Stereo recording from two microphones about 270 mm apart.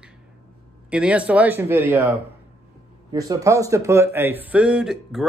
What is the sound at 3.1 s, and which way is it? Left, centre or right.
Speech, centre.